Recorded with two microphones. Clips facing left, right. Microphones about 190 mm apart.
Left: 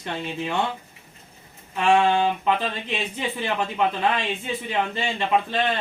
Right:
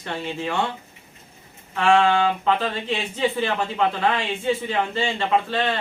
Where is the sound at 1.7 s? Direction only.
15° left (ahead or behind).